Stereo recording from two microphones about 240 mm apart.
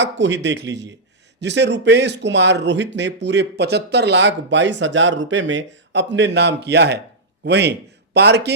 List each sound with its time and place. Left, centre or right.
0.0 s a man's voice: right